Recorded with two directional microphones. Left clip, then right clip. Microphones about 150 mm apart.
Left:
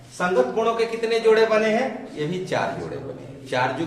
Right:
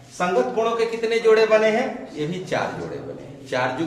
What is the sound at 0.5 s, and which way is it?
Speech, 20° left (ahead or behind).